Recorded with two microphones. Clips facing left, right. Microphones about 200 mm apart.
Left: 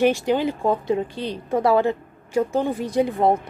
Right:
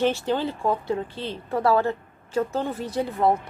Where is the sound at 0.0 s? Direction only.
15° left (ahead or behind).